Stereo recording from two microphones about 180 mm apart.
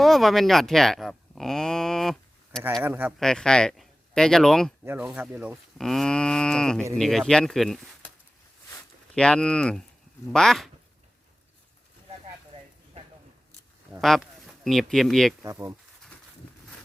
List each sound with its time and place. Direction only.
0.0 s a sound: centre (ahead or behind)
2.8 s speech: 10° right (ahead or behind)
3.2 s speech: 5° left (ahead or behind)
5.7 s livestock: centre (ahead or behind)
8.7 s a sound: 5° left (ahead or behind)
10.3 s livestock: centre (ahead or behind)
14.0 s speech: centre (ahead or behind)
15.4 s speech: 20° right (ahead or behind)